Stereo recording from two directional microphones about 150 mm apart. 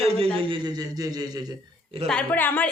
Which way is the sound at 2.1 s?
10° left (ahead or behind).